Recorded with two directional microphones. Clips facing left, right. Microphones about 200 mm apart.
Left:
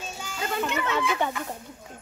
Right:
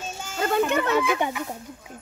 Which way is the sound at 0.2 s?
50° right (ahead or behind).